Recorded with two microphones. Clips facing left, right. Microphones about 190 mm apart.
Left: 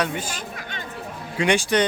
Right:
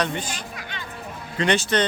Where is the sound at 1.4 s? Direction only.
10° left (ahead or behind).